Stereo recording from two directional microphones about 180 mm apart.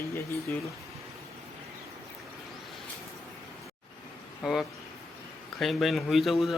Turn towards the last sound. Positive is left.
turn(degrees=0)  # may be behind; listen again after turning